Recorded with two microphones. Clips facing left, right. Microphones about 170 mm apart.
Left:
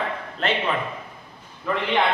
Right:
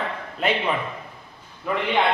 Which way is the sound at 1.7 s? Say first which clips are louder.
Even; 10° right (ahead or behind).